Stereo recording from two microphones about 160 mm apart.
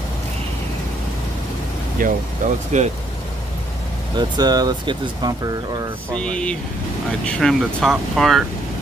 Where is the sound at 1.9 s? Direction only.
50° right (ahead or behind).